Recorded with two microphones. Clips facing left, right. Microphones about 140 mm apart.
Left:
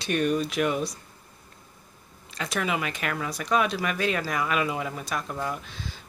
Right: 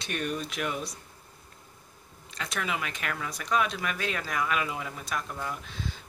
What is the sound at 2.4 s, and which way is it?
Speech, 5° left (ahead or behind).